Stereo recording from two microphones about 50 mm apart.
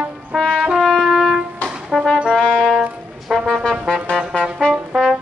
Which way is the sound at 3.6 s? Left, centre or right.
Centre.